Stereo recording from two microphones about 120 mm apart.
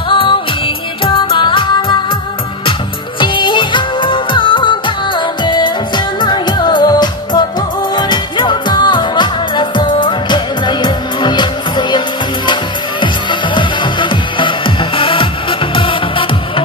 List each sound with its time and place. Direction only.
0.1 s music: 45° left (ahead or behind)
3.2 s music: 40° left (ahead or behind)
13.0 s music: 40° left (ahead or behind)